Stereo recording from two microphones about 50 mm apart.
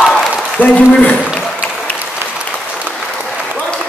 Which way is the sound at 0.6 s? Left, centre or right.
Left.